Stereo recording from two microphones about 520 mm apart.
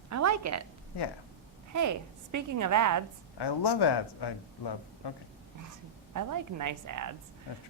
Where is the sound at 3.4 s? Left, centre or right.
Left.